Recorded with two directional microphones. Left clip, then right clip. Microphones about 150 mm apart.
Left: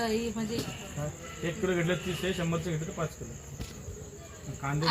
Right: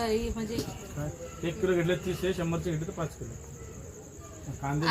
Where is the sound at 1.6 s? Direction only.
65° right (ahead or behind).